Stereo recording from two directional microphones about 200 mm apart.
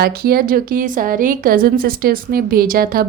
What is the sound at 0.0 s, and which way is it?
Speech, 50° right (ahead or behind).